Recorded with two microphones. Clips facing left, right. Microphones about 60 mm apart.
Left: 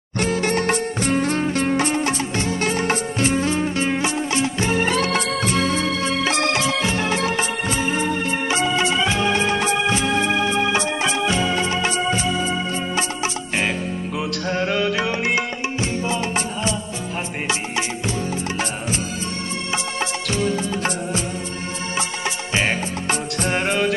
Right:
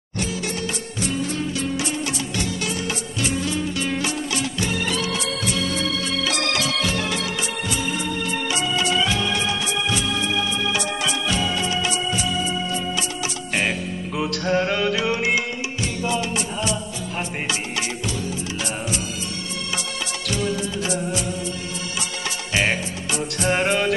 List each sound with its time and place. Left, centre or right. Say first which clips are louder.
0.2 s music: left 7 dB; left
14.1 s music: right 4 dB; centre
15.2 s music: left 1 dB; left
23.5 s music: even; centre